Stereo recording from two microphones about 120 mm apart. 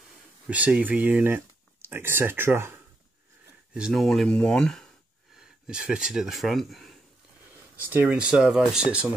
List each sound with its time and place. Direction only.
0.5 s speech: 10° right (ahead or behind)
3.7 s speech: 5° right (ahead or behind)
5.4 s speech: 5° right (ahead or behind)
7.9 s speech: 15° right (ahead or behind)